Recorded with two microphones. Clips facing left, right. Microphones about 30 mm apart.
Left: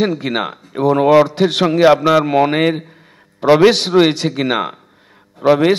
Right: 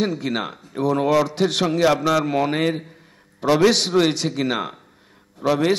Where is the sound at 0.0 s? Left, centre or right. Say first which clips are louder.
Left 6 dB; left.